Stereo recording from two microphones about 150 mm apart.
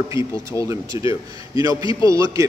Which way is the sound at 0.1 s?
20° right (ahead or behind).